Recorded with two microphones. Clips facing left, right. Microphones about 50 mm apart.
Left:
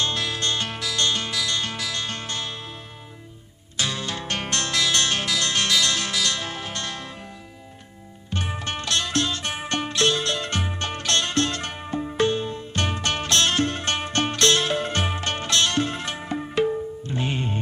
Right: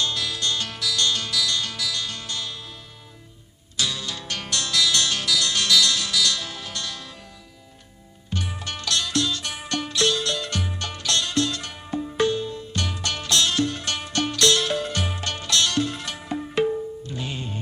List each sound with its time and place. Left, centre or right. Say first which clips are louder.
0.0 s music: left 1 dB; left
3.8 s music: left 1 dB; left
8.4 s music: left 3 dB; left